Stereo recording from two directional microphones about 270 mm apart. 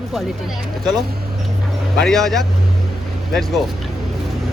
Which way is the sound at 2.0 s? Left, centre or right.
Centre.